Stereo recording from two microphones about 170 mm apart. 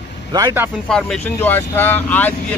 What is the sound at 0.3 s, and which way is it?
Speech, 25° right (ahead or behind).